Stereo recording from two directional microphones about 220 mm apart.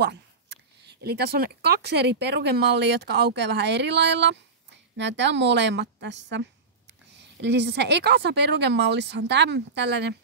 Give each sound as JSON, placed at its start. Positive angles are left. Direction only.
{"t": 0.0, "sound": "a sound", "side_deg": -50}
{"t": 1.0, "sound": "speech", "side_deg": -45}
{"t": 7.4, "sound": "speech", "side_deg": -50}